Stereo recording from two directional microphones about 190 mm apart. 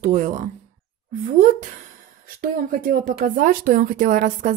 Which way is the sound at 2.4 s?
45° right (ahead or behind).